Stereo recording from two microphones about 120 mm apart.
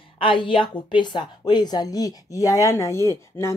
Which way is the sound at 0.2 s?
45° left (ahead or behind).